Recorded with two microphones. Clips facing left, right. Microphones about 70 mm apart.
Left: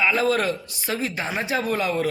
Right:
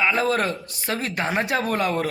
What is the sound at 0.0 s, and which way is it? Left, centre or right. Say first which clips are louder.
A man's voice: even; right.